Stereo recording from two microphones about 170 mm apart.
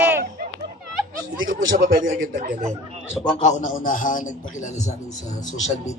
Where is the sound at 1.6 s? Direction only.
55° right (ahead or behind).